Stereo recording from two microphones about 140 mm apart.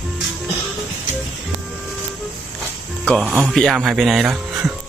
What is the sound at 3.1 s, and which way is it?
Speech, 5° left (ahead or behind).